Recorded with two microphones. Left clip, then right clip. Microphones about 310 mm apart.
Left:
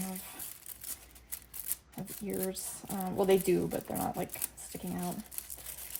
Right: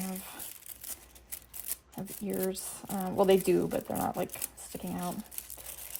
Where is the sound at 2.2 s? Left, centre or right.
Right.